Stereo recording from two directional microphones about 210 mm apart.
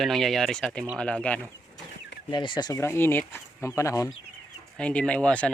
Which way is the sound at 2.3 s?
20° left (ahead or behind).